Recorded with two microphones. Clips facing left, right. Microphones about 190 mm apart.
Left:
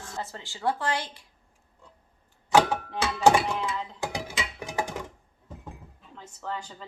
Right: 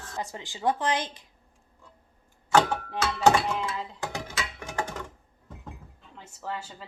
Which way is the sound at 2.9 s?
10° left (ahead or behind).